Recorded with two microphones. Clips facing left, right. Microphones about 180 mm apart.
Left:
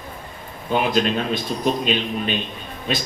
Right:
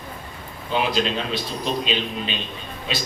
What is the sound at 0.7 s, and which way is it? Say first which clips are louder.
A man's voice: left 3 dB; 50° left (ahead or behind).